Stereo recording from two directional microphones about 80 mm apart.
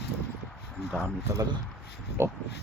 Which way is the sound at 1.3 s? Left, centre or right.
Right.